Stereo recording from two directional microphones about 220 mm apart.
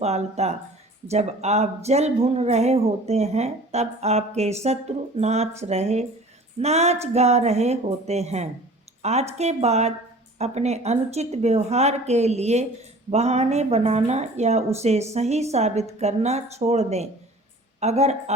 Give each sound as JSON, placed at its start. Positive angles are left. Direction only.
{"t": 0.0, "sound": "speech", "side_deg": -30}
{"t": 9.0, "sound": "a sound", "side_deg": -30}
{"t": 9.4, "sound": "speech", "side_deg": -30}